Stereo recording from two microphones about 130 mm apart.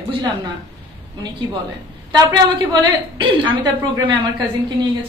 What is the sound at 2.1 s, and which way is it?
A woman's voice, 30° right (ahead or behind).